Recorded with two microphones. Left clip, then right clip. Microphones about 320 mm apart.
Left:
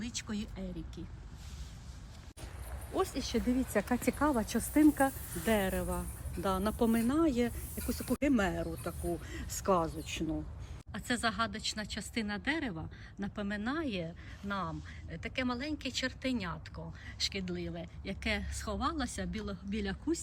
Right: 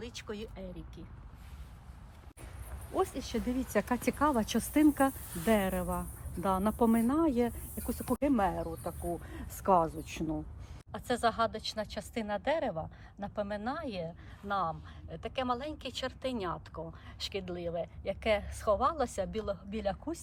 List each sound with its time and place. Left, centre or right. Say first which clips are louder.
0.0 s speech: even; centre
2.9 s speech: right 1 dB; right